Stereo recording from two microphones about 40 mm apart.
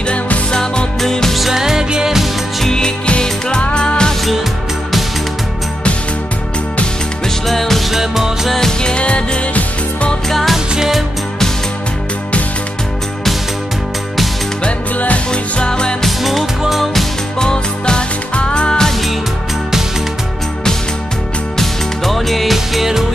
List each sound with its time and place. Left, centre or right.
0.5 s music: centre
1.3 s music: centre
2.6 s music: centre
7.4 s music: centre
7.9 s music: centre
8.5 s music: centre
8.9 s music: left
10.3 s music: centre
15.0 s music: left
15.6 s music: left
16.0 s music: centre
17.4 s music: left
21.5 s music: centre